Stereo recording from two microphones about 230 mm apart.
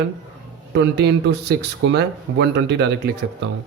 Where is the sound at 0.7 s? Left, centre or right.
Right.